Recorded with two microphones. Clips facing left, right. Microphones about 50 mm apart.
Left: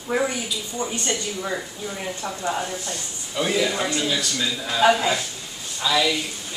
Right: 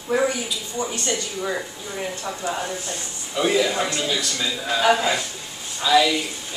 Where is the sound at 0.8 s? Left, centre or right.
Left.